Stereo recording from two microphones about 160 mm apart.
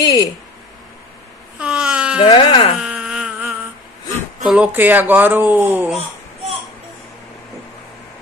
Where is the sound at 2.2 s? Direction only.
35° left (ahead or behind).